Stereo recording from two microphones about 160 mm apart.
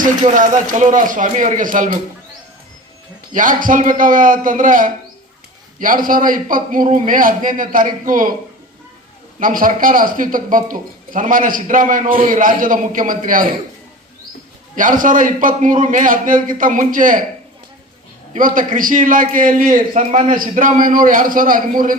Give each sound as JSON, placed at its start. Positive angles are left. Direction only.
{"t": 0.0, "sound": "a man's voice", "side_deg": -55}
{"t": 3.3, "sound": "a man's voice", "side_deg": -55}
{"t": 9.4, "sound": "a man's voice", "side_deg": -60}
{"t": 14.8, "sound": "a man's voice", "side_deg": -55}
{"t": 18.3, "sound": "a man's voice", "side_deg": -55}
{"t": 20.0, "sound": "a man's voice", "side_deg": -40}
{"t": 20.3, "sound": "a man's voice", "side_deg": -55}